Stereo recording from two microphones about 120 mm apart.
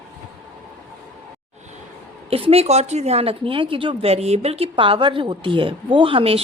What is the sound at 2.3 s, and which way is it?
A woman's voice, 55° right (ahead or behind).